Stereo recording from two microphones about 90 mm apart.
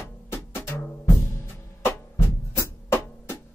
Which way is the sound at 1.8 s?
30° left (ahead or behind).